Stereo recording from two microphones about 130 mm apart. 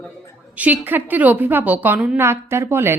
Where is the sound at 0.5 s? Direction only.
10° right (ahead or behind).